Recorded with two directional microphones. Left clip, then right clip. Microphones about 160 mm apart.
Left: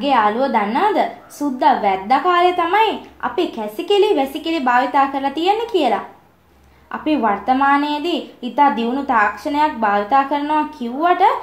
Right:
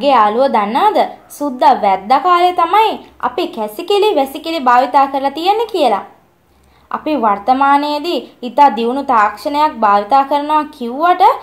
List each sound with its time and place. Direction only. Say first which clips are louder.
0.0 s a woman's voice: right 5 dB; 30° right (ahead or behind)